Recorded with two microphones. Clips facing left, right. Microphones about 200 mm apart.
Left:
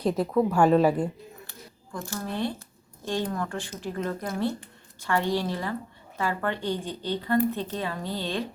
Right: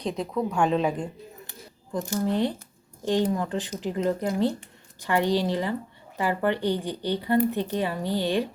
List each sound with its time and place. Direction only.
0.0 s a woman's voice: 5° left (ahead or behind)
1.5 s a sound: 15° right (ahead or behind)
3.0 s a woman's voice: 15° right (ahead or behind)